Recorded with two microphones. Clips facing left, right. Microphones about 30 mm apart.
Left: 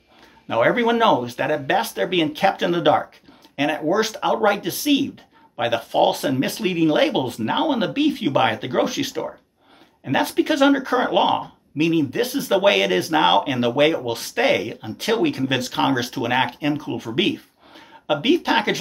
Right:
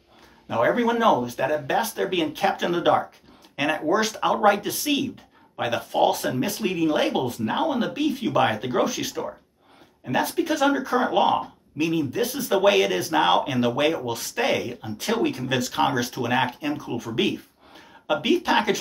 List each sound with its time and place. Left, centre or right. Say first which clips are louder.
0.5 s speech: left 3 dB; left; by 3.0 s centre
3.5 s speech: left 2 dB; centre
5.1 s a sound: left 4 dB; left
5.9 s speech: left 3 dB; left
8.3 s speech: left 2 dB; left
10.2 s speech: left 5 dB; left
12.3 s speech: left 1 dB; centre